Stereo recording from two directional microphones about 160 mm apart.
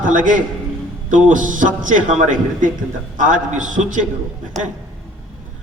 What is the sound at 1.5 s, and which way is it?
A man's voice, 55° right (ahead or behind).